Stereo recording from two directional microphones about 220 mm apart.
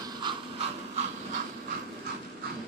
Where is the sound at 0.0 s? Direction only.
20° right (ahead or behind).